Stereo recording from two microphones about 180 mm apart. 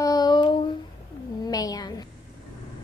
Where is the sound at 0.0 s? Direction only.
20° left (ahead or behind).